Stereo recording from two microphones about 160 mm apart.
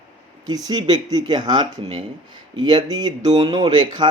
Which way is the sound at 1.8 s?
40° right (ahead or behind).